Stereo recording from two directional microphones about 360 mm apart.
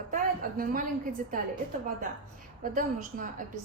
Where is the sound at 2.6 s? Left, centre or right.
Right.